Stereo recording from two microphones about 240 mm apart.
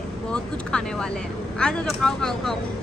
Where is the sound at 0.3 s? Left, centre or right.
Centre.